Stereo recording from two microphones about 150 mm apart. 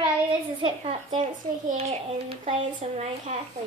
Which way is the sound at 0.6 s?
30° right (ahead or behind).